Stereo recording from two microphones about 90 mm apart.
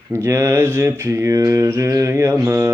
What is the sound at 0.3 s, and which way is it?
Mantra, 30° right (ahead or behind).